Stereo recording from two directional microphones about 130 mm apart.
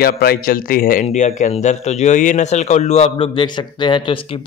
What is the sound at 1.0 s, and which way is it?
Speech, 70° left (ahead or behind).